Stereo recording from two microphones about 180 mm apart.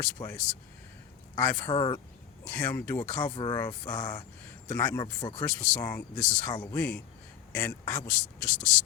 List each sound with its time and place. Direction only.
0.0 s a man's voice: 10° left (ahead or behind)
1.7 s speech: 25° left (ahead or behind)
2.5 s a man's voice: 10° left (ahead or behind)
3.2 s speech: 20° left (ahead or behind)
5.4 s a man's voice: 10° left (ahead or behind)